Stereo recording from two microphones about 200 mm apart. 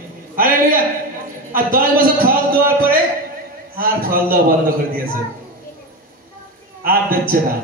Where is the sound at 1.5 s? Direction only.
45° right (ahead or behind).